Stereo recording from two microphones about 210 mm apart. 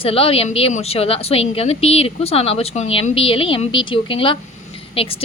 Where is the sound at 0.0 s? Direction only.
25° left (ahead or behind).